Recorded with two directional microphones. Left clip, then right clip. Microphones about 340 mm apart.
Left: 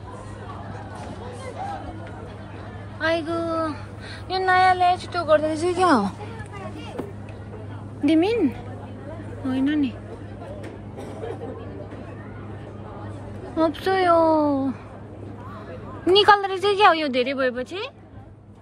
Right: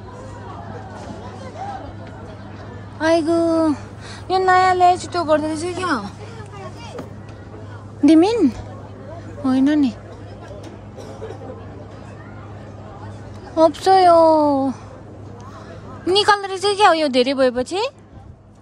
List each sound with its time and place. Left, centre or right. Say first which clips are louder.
3.0 s a woman's voice: right 7 dB; centre
8.0 s a woman's voice: right 6 dB; right
13.6 s speech: right 8 dB; centre
16.1 s speech: even; centre